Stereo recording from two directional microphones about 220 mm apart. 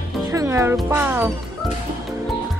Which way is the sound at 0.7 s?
10° right (ahead or behind).